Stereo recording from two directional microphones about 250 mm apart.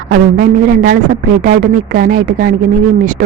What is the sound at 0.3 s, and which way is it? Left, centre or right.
A woman's voice, right.